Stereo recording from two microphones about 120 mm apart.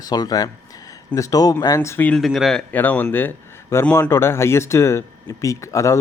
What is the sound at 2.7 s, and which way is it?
A man's voice, 15° left (ahead or behind).